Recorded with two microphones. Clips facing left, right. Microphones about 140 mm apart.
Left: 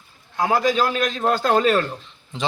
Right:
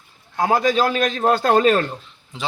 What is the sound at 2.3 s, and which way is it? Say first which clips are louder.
Speech: left 3 dB; 5° right (ahead or behind).